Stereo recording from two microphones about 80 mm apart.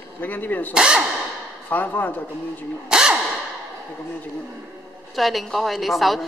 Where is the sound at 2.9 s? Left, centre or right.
Centre.